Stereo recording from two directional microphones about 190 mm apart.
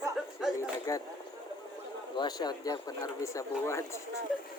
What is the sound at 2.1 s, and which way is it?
Speech, 20° left (ahead or behind).